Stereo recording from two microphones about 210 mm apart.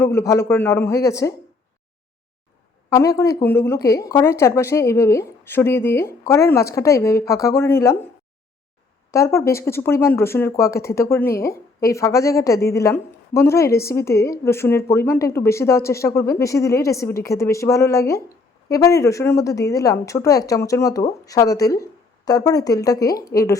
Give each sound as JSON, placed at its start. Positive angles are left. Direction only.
{"t": 0.0, "sound": "speech", "side_deg": 15}
{"t": 2.9, "sound": "speech", "side_deg": 15}
{"t": 9.1, "sound": "speech", "side_deg": 15}